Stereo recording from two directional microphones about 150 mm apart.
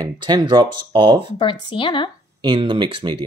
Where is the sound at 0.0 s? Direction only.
25° right (ahead or behind).